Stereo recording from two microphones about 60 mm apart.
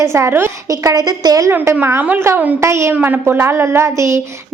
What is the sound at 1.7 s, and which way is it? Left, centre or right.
A woman's voice, right.